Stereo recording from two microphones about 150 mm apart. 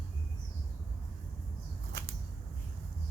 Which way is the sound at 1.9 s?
90° right.